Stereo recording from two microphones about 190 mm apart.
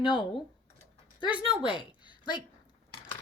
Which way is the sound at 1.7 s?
25° left (ahead or behind).